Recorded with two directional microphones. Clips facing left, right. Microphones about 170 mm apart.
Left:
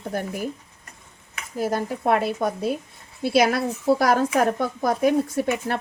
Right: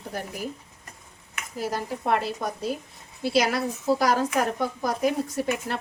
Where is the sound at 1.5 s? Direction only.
50° left (ahead or behind).